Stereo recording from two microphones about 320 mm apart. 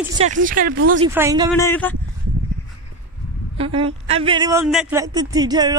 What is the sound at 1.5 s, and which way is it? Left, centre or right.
Speech, centre.